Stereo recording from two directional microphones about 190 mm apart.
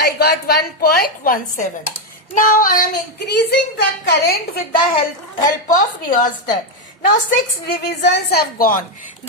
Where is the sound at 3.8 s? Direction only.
65° left (ahead or behind).